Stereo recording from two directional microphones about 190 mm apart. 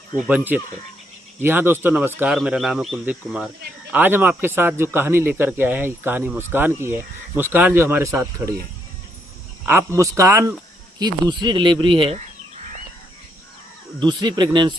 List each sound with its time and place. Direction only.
0.3 s speech: 10° right (ahead or behind)
9.6 s speech: 15° right (ahead or behind)
14.0 s speech: 25° right (ahead or behind)